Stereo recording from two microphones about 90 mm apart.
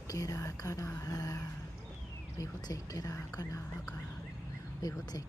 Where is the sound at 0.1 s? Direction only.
40° left (ahead or behind).